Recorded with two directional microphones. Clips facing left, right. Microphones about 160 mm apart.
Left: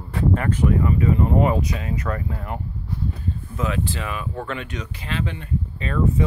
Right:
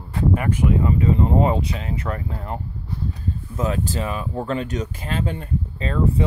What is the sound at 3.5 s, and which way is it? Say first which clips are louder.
Speech: right 2 dB; 40° right (ahead or behind).